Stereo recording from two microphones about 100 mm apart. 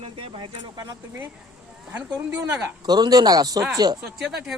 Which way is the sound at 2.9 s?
45° right (ahead or behind).